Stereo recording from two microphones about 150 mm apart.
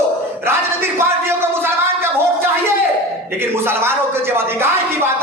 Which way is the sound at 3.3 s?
15° right (ahead or behind).